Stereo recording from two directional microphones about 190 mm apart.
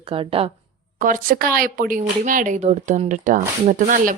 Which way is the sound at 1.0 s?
45° right (ahead or behind).